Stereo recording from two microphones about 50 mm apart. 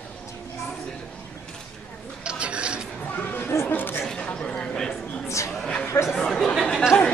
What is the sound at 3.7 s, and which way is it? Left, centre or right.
Chatter, left.